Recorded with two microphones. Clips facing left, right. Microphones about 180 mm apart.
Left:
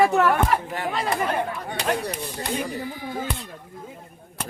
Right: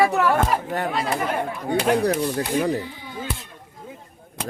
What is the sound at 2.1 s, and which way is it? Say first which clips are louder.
Speech: right 6 dB; 65° right (ahead or behind).